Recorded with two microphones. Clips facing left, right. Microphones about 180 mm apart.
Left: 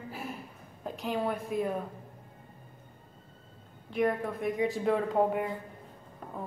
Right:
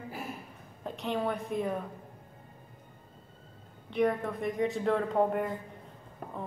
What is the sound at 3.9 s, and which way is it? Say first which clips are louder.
Speech: right 1 dB; centre (ahead or behind).